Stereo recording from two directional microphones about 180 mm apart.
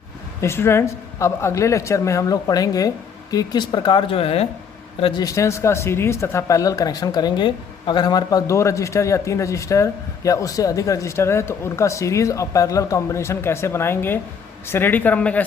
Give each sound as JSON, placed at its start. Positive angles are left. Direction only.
{"t": 0.4, "sound": "speech", "side_deg": 15}
{"t": 5.2, "sound": "speech", "side_deg": 15}